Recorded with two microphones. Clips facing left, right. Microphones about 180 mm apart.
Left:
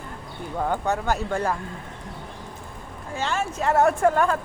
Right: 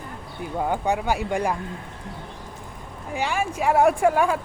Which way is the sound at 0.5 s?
10° right (ahead or behind).